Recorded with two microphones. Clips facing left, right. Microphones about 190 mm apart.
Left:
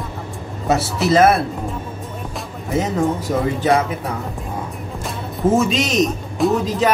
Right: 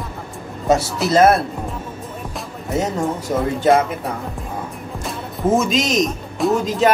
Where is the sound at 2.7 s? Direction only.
Centre (ahead or behind).